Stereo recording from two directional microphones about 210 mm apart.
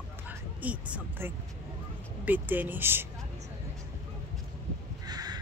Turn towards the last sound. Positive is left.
turn(degrees=-20)  # may be behind; listen again after turning